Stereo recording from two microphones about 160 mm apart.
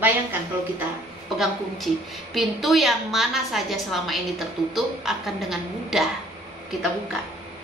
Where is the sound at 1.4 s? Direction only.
Centre (ahead or behind).